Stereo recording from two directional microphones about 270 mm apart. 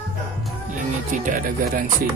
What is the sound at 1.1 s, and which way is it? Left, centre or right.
Speech, right.